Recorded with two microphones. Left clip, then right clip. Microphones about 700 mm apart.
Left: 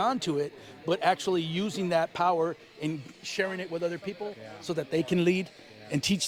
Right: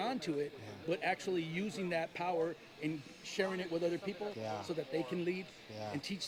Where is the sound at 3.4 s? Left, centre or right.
Left.